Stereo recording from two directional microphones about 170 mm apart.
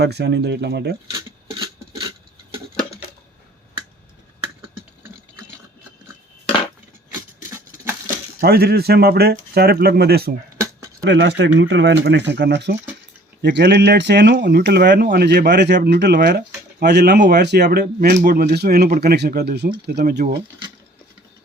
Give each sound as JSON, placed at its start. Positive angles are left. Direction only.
{"t": 0.0, "sound": "speech", "side_deg": -75}
{"t": 7.1, "sound": "a sound", "side_deg": -15}
{"t": 8.4, "sound": "speech", "side_deg": -65}
{"t": 11.0, "sound": "speech", "side_deg": -85}